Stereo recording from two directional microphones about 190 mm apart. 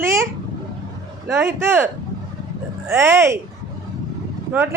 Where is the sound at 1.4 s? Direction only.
15° right (ahead or behind).